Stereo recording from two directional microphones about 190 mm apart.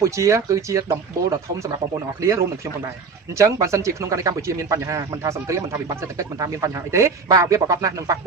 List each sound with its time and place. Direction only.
0.0 s speech: 15° right (ahead or behind)
3.3 s speech: 15° right (ahead or behind)